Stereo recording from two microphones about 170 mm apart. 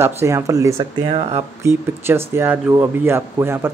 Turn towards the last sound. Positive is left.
turn(degrees=-15)  # may be behind; listen again after turning